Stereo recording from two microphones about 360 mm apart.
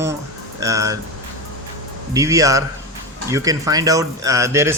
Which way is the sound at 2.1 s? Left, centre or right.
Centre.